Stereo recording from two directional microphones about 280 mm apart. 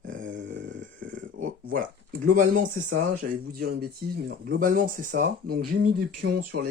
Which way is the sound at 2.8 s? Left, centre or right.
Right.